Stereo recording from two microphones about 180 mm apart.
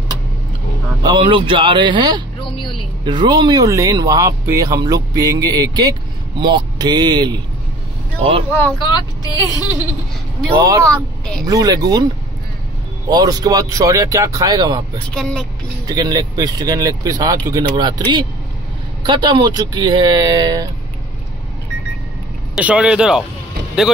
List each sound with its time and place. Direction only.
1.0 s speech: 25° right (ahead or behind)
8.7 s speech: 25° left (ahead or behind)
10.9 s speech: 5° left (ahead or behind)
11.4 s speech: 20° right (ahead or behind)
13.1 s speech: 20° right (ahead or behind)
15.0 s speech: 5° left (ahead or behind)
15.9 s speech: 20° right (ahead or behind)
22.6 s speech: 5° right (ahead or behind)